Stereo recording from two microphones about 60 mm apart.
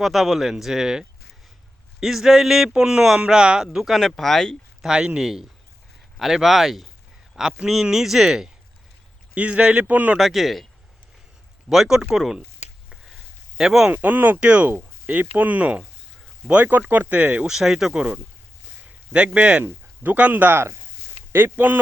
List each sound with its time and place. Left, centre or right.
0.0 s speech: centre
4.8 s speech: centre
9.3 s speech: centre
9.8 s speech: right
10.2 s speech: centre
11.7 s speech: centre
12.1 s speech: centre
13.6 s speech: centre
13.9 s speech: right
14.3 s speech: centre
17.4 s speech: centre
19.1 s speech: centre